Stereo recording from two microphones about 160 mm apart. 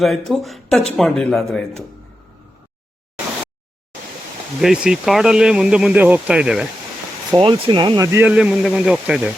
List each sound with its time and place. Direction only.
0.0 s speech: centre (ahead or behind)
4.6 s speech: 5° right (ahead or behind)
7.3 s speech: 30° right (ahead or behind)
8.3 s speech: 5° right (ahead or behind)